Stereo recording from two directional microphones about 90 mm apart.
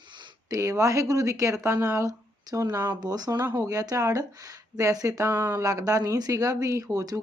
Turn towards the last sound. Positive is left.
turn(degrees=-45)  # may be behind; listen again after turning